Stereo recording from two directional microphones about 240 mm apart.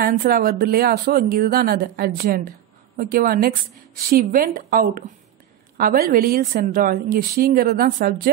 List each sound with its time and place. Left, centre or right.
0.0 s a woman's voice: right